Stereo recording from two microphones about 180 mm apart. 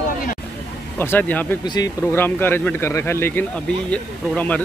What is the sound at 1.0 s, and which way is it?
Speech, 10° left (ahead or behind).